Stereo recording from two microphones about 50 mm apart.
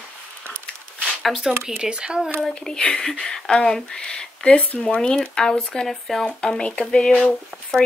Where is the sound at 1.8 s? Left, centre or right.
Centre.